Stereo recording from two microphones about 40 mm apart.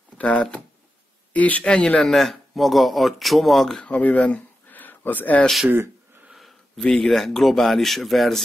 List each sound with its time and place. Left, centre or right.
0.2 s speech: left
2.0 s speech: centre
3.9 s speech: left
4.4 s a sound: left
6.8 s speech: centre